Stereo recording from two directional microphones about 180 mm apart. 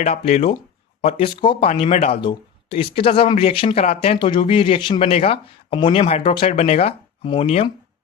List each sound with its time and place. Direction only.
0.0 s speech: 35° left (ahead or behind)